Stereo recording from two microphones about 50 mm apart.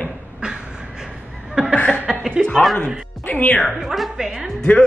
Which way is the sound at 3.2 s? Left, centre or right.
Left.